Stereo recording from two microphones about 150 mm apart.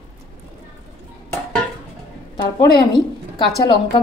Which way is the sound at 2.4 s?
30° left (ahead or behind).